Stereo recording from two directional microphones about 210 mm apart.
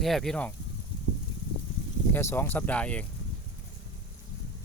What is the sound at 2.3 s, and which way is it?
Speech, 10° left (ahead or behind).